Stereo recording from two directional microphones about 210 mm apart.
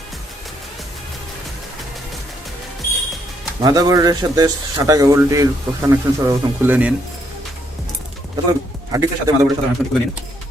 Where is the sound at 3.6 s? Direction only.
15° right (ahead or behind).